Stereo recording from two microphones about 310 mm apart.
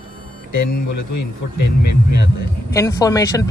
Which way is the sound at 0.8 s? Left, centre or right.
Left.